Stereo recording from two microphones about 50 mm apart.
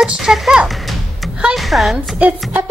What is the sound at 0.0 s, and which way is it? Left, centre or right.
Speech, centre.